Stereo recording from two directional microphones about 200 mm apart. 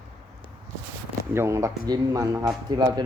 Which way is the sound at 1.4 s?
15° right (ahead or behind).